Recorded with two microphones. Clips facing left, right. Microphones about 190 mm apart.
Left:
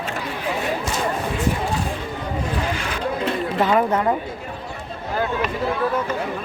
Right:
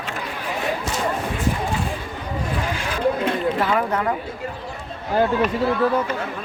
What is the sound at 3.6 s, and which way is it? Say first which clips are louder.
Speech: left 3 dB; 25° left (ahead or behind).